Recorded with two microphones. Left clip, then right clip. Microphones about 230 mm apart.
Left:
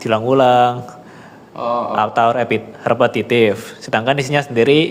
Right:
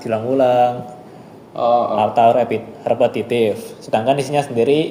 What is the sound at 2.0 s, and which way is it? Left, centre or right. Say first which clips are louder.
Speech: left 1 dB; left.